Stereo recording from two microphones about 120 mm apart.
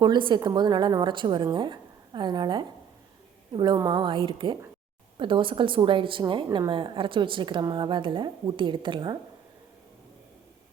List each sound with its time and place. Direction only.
0.0 s a woman's voice: 40° right (ahead or behind)